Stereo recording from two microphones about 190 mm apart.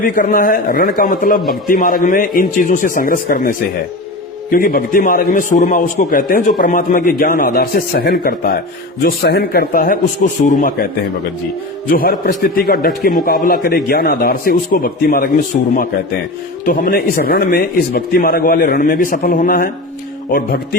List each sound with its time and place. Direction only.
0.0 s a man's voice: 45° left (ahead or behind)
4.5 s a man's voice: 50° left (ahead or behind)
11.9 s a man's voice: 50° left (ahead or behind)